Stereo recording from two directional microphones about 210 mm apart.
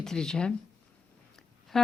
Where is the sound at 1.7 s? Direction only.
Centre (ahead or behind).